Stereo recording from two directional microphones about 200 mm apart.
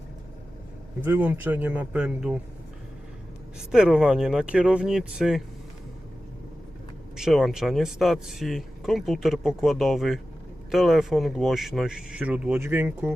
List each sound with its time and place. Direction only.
1.0 s speech: 10° right (ahead or behind)
3.7 s speech: 5° right (ahead or behind)
7.2 s speech: centre (ahead or behind)